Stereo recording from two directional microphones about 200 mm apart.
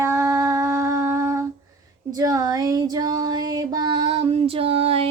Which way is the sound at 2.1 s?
20° right (ahead or behind).